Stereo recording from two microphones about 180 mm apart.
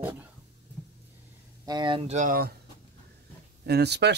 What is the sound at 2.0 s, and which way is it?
Speech, 45° right (ahead or behind).